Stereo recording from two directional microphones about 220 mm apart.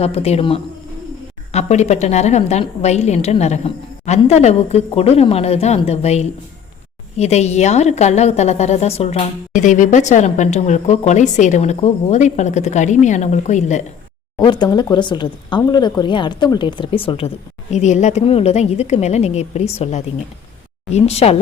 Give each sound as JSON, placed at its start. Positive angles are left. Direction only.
{"t": 0.0, "sound": "a woman's voice", "side_deg": 25}
{"t": 14.3, "sound": "speech", "side_deg": 20}